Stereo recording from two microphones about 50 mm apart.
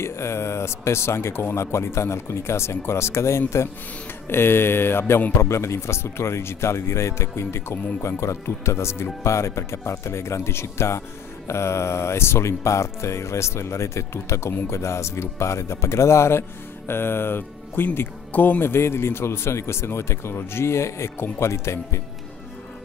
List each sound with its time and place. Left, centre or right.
0.0 s a man's voice: left
4.3 s speech: left
5.4 s speech: left
18.3 s speech: left
18.6 s a man's voice: left